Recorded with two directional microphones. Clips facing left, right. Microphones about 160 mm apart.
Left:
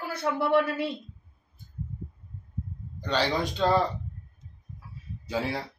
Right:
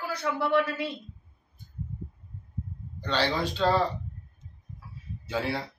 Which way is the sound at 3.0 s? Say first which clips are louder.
Left 1 dB; 10° left (ahead or behind).